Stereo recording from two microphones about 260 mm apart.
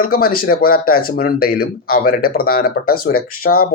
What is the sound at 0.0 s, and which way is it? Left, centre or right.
Speech, left.